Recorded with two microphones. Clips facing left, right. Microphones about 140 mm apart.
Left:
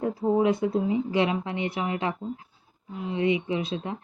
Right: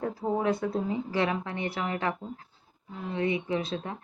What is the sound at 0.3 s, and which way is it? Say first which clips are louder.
A woman's voice: left 4 dB; 20° left (ahead or behind).